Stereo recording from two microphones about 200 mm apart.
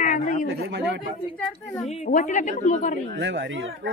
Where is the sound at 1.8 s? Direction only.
35° left (ahead or behind).